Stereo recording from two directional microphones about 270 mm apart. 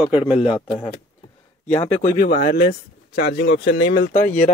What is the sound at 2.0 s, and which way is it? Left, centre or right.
Speech, left.